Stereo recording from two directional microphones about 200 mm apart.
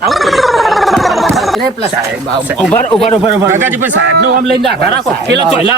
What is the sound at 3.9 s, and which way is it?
Speech, 60° right (ahead or behind).